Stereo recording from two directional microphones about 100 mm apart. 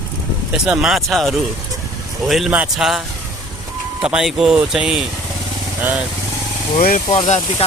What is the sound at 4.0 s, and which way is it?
Speech, 5° right (ahead or behind).